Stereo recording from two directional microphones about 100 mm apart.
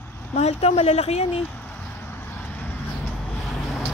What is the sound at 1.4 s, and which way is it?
Vehicle, 15° left (ahead or behind).